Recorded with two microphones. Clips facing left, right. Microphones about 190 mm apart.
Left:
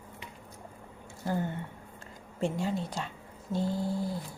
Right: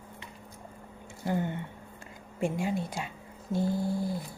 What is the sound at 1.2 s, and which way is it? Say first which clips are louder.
Speech: right 1 dB; 15° right (ahead or behind).